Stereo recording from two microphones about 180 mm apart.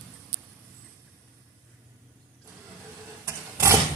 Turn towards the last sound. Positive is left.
turn(degrees=-15)  # may be behind; listen again after turning